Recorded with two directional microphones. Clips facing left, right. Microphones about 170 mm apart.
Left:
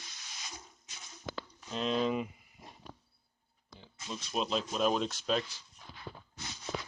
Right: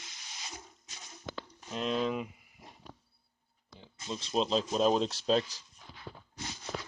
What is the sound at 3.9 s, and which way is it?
Speech, 25° right (ahead or behind).